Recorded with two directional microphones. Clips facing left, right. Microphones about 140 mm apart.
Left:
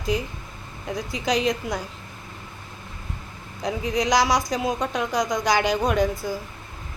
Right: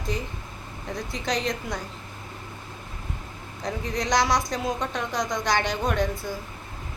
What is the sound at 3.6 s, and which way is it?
A woman's voice, 5° left (ahead or behind).